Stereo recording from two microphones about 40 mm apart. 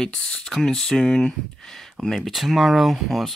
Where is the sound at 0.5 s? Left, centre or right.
Centre.